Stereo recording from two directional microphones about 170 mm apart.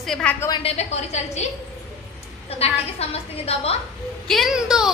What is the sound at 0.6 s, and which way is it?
A woman's voice, 40° left (ahead or behind).